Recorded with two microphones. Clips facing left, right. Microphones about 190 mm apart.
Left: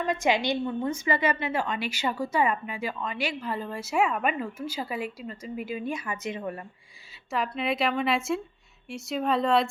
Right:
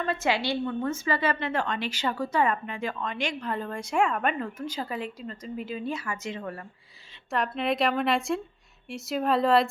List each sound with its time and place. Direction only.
0.0 s a woman's voice: 15° left (ahead or behind)
7.3 s a woman's voice: centre (ahead or behind)